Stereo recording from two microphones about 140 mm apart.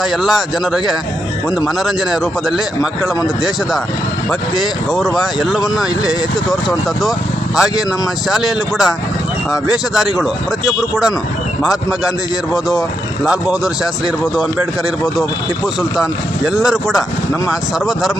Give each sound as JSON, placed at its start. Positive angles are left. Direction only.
{"t": 0.0, "sound": "speech", "side_deg": 0}
{"t": 4.6, "sound": "speech", "side_deg": 0}
{"t": 15.0, "sound": "speech", "side_deg": 0}